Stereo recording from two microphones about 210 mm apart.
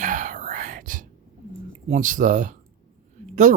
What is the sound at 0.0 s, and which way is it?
Whispering, 40° right (ahead or behind).